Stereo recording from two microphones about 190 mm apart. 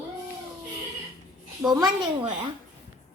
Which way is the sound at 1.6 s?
20° right (ahead or behind).